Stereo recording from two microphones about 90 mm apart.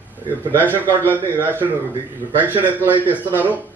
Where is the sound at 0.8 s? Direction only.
25° left (ahead or behind).